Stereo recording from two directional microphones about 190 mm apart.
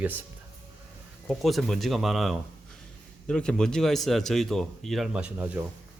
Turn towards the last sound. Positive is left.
turn(degrees=-10)  # may be behind; listen again after turning